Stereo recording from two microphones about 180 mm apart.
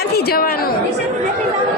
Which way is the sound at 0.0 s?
60° left (ahead or behind).